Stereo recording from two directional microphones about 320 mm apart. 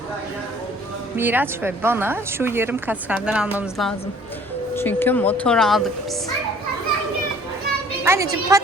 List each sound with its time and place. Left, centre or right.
1.1 s a woman's voice: centre
8.0 s a woman's voice: centre